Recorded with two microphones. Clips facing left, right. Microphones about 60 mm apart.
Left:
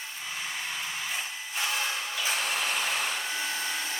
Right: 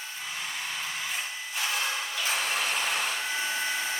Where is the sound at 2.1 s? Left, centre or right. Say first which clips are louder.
Even; centre.